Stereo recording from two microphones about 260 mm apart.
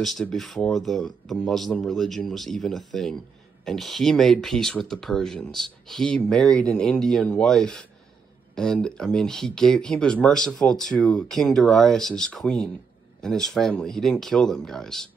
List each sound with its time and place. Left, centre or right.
0.0 s speech: centre